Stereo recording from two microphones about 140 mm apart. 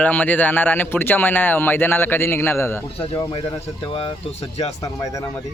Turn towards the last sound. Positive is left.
turn(degrees=25)  # may be behind; listen again after turning